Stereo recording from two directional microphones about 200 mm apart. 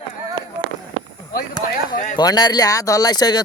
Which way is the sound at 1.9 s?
45° left (ahead or behind).